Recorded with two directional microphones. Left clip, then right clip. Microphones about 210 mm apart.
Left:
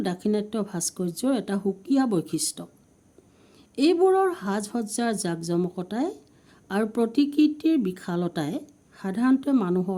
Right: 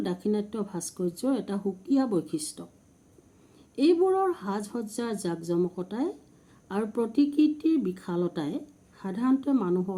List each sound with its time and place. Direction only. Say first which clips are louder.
0.0 s speech: left 3 dB; 45° left (ahead or behind)
3.8 s speech: left 3 dB; 45° left (ahead or behind)